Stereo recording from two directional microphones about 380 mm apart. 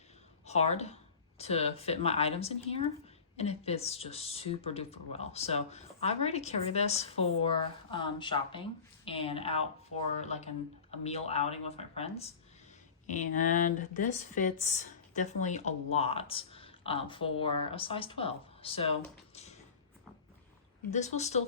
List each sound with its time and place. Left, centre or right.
0.4 s speech: centre
19.3 s a sound: centre
20.9 s speech: centre